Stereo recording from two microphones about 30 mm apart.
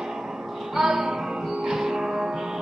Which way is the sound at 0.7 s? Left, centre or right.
Centre.